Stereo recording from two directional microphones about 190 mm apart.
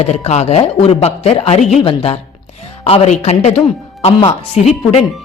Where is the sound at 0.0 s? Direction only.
35° left (ahead or behind).